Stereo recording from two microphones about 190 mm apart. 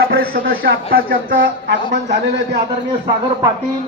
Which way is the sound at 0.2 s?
50° right (ahead or behind).